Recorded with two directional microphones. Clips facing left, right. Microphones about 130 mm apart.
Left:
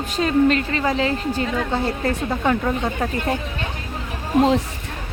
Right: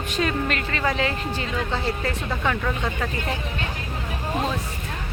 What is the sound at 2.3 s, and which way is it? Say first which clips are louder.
Speech: left 4 dB; 30° left (ahead or behind).